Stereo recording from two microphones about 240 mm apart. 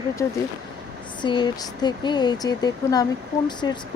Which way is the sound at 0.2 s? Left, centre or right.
Centre.